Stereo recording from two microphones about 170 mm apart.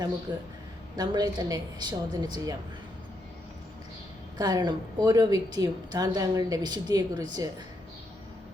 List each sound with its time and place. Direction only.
0.3 s a woman's voice: 25° right (ahead or behind)
4.4 s a woman's voice: 20° right (ahead or behind)